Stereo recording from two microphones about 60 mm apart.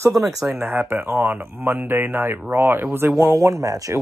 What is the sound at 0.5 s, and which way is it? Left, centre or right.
Speech, right.